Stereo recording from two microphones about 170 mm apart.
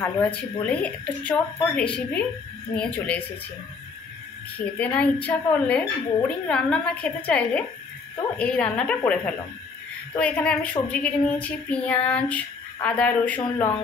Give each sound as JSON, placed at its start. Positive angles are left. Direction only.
{"t": 0.0, "sound": "a woman's voice", "side_deg": 10}
{"t": 4.6, "sound": "a woman's voice", "side_deg": 10}